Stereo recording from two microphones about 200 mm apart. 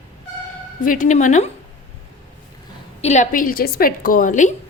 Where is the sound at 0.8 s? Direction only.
40° left (ahead or behind).